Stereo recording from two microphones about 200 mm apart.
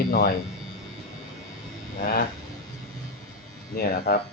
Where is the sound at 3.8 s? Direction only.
50° left (ahead or behind).